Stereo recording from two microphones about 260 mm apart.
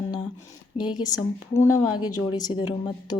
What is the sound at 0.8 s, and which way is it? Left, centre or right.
Speech, centre.